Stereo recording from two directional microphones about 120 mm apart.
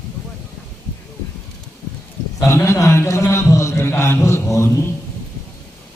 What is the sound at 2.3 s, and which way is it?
A man's voice, 25° left (ahead or behind).